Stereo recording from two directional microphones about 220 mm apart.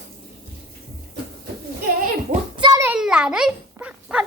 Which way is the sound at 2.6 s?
15° right (ahead or behind).